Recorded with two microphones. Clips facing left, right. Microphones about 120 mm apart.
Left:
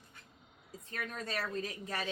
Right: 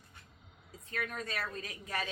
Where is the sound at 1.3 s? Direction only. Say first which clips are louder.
Left 3 dB; 30° left (ahead or behind).